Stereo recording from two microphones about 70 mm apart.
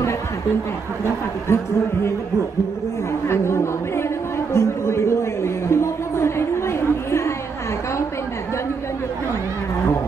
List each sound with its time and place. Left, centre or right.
1.5 s speech: left
3.3 s chatter: left
4.6 s a sound: left